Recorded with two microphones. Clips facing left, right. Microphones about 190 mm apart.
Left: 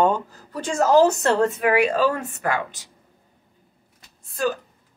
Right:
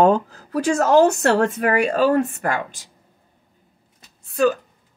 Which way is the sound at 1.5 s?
45° right (ahead or behind).